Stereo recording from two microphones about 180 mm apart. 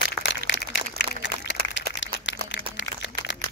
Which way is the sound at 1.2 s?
80° left.